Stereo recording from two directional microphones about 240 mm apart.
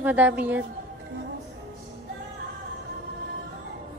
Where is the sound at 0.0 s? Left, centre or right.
Centre.